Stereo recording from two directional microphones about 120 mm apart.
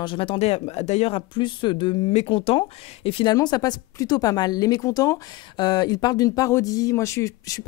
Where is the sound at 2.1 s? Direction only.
55° left (ahead or behind).